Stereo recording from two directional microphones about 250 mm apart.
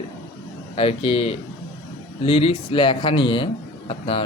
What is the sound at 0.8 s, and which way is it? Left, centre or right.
Speech, left.